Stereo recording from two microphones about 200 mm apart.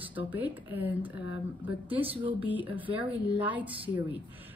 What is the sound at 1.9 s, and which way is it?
Speech, 30° right (ahead or behind).